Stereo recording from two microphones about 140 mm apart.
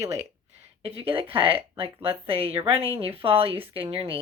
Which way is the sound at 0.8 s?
40° right (ahead or behind).